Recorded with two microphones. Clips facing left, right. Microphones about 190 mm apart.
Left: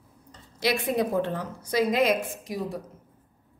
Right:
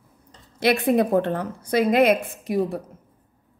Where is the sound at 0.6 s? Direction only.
55° right (ahead or behind).